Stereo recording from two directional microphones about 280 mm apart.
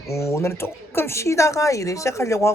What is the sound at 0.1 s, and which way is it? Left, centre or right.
Speech, centre.